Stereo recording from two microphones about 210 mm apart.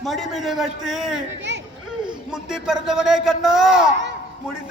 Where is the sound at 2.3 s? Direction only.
5° right (ahead or behind).